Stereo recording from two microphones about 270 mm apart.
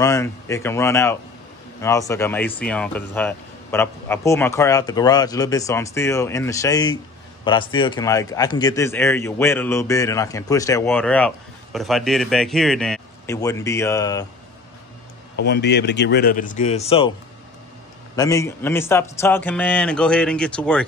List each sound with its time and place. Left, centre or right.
0.0 s a man's voice: centre
15.3 s a man's voice: left
18.1 s a man's voice: centre